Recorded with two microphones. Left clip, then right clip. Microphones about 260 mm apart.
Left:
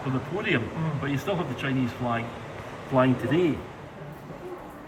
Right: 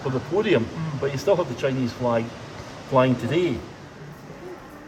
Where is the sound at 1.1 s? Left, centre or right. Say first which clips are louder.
Right 9 dB; centre.